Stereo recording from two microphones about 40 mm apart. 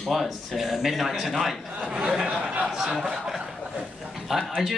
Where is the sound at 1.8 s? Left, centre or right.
Right.